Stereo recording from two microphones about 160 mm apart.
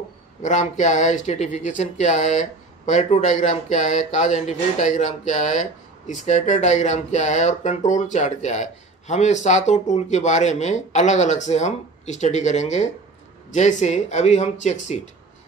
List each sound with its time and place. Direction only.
0.4 s speech: 50° left (ahead or behind)